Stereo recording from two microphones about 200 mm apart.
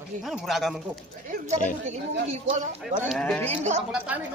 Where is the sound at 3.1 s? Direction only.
5° left (ahead or behind).